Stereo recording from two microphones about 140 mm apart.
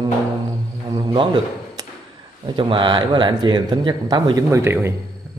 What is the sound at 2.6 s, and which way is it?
Speech, 35° right (ahead or behind).